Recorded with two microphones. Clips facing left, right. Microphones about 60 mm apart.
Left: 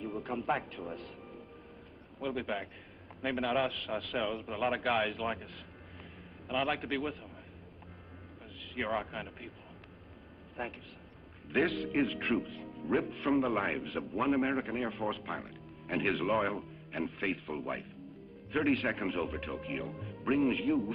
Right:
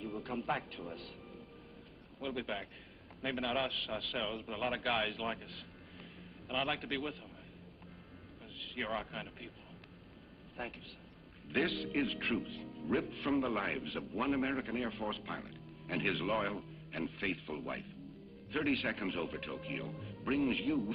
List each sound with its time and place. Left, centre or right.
0.0 s speech: centre
2.1 s a man's voice: centre
6.5 s a man's voice: centre
8.7 s a man's voice: centre
10.6 s a man's voice: centre
12.6 s music: centre
13.3 s a man's voice: centre